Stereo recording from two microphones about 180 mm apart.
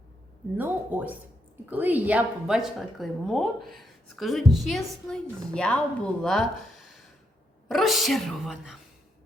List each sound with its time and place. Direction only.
0.5 s a woman's voice: 10° right (ahead or behind)